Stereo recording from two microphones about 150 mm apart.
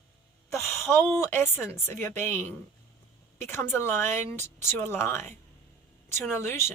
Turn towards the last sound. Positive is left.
turn(degrees=15)  # may be behind; listen again after turning